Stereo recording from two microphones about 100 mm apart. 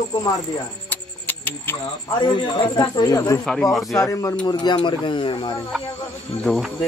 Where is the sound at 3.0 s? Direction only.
35° left (ahead or behind).